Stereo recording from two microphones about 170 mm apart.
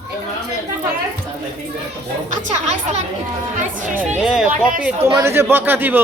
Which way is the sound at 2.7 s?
40° right (ahead or behind).